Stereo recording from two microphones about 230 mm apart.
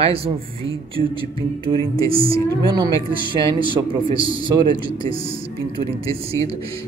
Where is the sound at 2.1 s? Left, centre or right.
Right.